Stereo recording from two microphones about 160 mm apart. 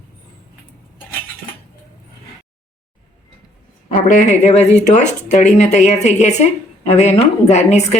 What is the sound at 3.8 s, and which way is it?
A woman's voice, 55° left (ahead or behind).